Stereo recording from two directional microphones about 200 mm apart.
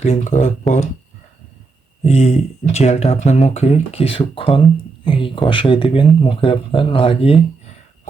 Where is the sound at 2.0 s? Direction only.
35° left (ahead or behind).